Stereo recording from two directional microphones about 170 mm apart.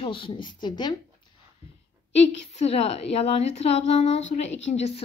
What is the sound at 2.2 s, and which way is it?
A woman's voice, 35° left (ahead or behind).